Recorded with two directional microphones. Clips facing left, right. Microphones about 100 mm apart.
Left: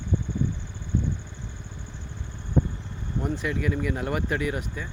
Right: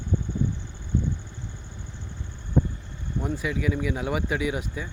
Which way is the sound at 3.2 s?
5° right (ahead or behind).